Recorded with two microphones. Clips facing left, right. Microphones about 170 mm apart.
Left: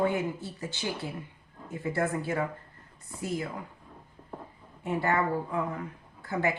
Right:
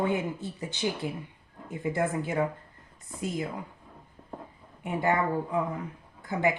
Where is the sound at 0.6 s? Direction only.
20° right (ahead or behind).